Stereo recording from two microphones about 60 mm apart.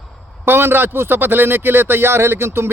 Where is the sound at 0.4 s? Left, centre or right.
Right.